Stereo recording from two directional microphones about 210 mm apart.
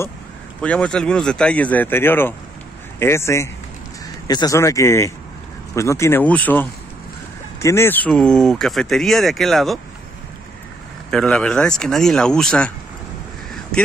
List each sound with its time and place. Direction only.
0.6 s speech: 5° left (ahead or behind)
11.1 s speech: 5° left (ahead or behind)